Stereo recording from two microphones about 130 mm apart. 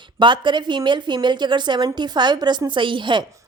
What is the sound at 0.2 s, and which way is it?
A woman's voice, 35° right (ahead or behind).